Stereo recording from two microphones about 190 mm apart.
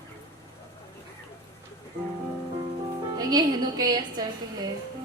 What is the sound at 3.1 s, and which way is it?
Music, 20° right (ahead or behind).